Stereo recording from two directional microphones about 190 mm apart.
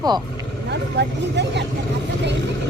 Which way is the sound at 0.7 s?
65° right (ahead or behind).